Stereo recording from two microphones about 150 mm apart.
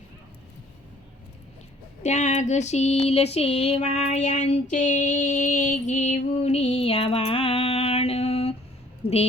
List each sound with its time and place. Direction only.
2.0 s female singing: 50° left (ahead or behind)
9.0 s a woman's voice: 90° left